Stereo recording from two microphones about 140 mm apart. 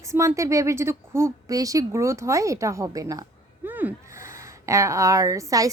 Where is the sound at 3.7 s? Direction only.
15° right (ahead or behind).